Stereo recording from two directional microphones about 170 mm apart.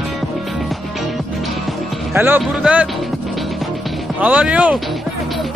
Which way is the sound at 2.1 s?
10° right (ahead or behind).